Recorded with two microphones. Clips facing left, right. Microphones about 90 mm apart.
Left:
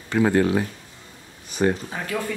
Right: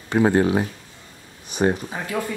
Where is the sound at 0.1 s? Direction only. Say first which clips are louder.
Right 1 dB; 20° right (ahead or behind).